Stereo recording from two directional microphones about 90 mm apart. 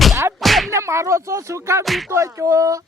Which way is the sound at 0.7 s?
30° right (ahead or behind).